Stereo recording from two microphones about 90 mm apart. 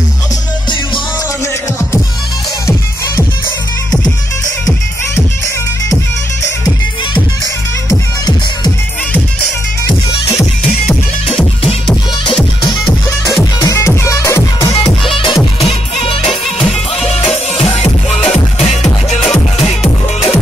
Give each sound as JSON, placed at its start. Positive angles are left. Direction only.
{"t": 7.9, "sound": "music", "side_deg": 45}
{"t": 13.7, "sound": "music", "side_deg": 35}
{"t": 15.0, "sound": "music", "side_deg": 75}
{"t": 15.6, "sound": "music", "side_deg": 90}